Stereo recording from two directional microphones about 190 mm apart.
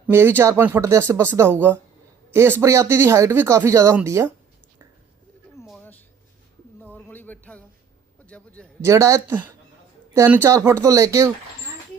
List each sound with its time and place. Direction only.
0.1 s speech: 10° right (ahead or behind)
5.6 s a sound: 5° left (ahead or behind)
6.8 s music: 10° left (ahead or behind)
8.3 s a man's voice: 5° left (ahead or behind)
8.8 s speech: 15° right (ahead or behind)